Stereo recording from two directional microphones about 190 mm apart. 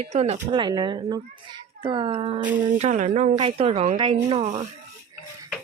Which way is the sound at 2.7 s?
40° right (ahead or behind).